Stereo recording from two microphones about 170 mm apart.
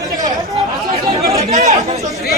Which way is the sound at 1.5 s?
45° right (ahead or behind).